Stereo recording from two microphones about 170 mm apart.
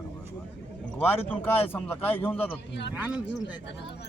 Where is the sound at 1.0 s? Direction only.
10° left (ahead or behind).